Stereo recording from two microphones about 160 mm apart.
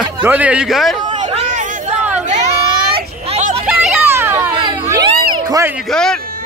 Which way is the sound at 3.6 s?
10° right (ahead or behind).